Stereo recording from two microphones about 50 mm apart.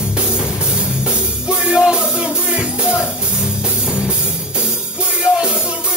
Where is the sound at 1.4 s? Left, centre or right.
Centre.